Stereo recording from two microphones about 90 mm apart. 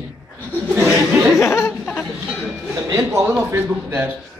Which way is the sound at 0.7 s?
5° right (ahead or behind).